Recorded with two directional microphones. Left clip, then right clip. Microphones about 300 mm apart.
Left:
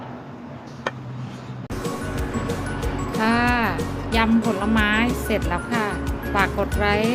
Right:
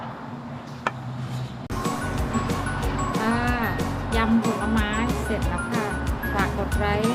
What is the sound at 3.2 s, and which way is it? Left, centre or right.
Music, left.